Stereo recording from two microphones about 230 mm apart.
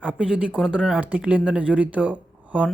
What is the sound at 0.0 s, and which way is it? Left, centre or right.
Speech, centre.